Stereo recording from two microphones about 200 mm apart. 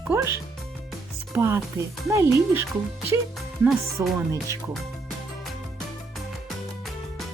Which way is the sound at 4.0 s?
15° right (ahead or behind).